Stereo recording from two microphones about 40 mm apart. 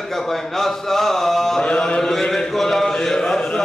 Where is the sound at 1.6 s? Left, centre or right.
Left.